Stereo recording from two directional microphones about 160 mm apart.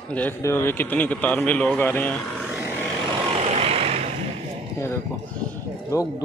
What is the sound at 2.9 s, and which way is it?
Vehicle, 25° right (ahead or behind).